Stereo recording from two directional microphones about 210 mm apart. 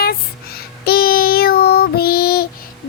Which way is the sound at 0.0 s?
45° left (ahead or behind).